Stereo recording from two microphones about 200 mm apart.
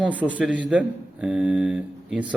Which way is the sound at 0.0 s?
5° right (ahead or behind).